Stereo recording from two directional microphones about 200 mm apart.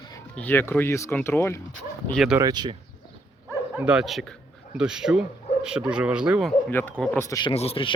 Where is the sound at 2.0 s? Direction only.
Centre (ahead or behind).